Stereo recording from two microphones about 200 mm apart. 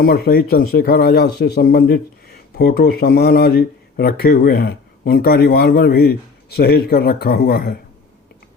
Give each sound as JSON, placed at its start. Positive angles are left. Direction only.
{"t": 0.0, "sound": "speech", "side_deg": 50}